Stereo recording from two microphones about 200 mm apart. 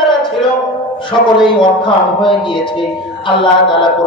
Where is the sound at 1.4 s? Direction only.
25° left (ahead or behind).